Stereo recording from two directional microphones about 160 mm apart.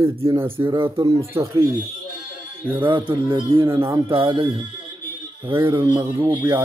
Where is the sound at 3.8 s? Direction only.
20° right (ahead or behind).